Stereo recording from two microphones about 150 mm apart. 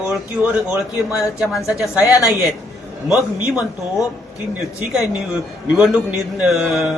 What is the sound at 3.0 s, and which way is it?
Speech, 5° right (ahead or behind).